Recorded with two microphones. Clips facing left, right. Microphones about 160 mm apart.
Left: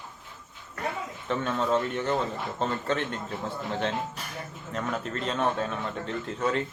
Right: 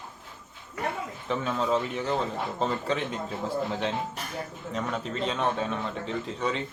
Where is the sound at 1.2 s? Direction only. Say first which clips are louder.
Even; centre (ahead or behind).